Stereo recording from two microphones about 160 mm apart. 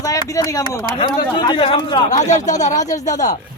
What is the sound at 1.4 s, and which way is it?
Speech, 30° left (ahead or behind).